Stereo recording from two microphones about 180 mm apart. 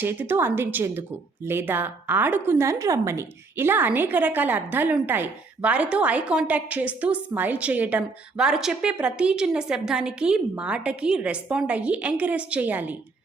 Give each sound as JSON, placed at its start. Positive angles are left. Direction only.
{"t": 0.0, "sound": "a woman's voice", "side_deg": -10}